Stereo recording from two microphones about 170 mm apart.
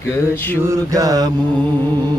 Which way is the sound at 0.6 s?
20° right (ahead or behind).